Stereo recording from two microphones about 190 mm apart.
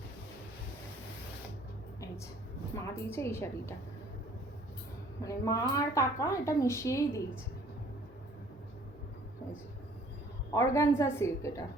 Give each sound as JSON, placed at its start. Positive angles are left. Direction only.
{"t": 2.7, "sound": "speech", "side_deg": 15}
{"t": 5.2, "sound": "speech", "side_deg": 20}
{"t": 10.5, "sound": "speech", "side_deg": 15}